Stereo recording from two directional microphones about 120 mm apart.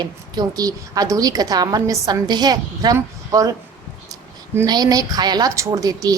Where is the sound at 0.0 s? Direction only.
35° right (ahead or behind).